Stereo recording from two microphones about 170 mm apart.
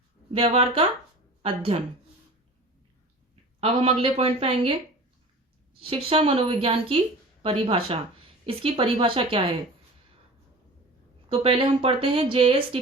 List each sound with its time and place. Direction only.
0.3 s a woman's voice: 35° right (ahead or behind)
3.6 s speech: 35° right (ahead or behind)
5.8 s speech: 35° right (ahead or behind)
11.3 s speech: 30° right (ahead or behind)